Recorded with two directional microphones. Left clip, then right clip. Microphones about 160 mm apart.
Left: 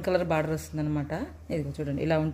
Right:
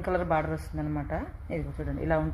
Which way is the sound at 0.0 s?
50° left (ahead or behind).